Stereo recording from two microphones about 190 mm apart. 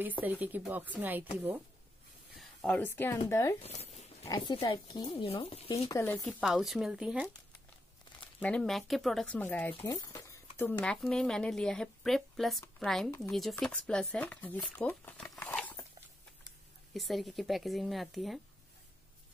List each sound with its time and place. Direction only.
0.2 s speech: 10° right (ahead or behind)
2.3 s speech: 5° left (ahead or behind)
3.6 s a sound: 35° left (ahead or behind)
4.3 s speech: 25° left (ahead or behind)
5.9 s speech: 20° left (ahead or behind)
6.2 s speech: centre (ahead or behind)
8.4 s speech: 5° left (ahead or behind)
9.8 s a sound: 15° left (ahead or behind)
10.6 s speech: 10° left (ahead or behind)
16.9 s speech: centre (ahead or behind)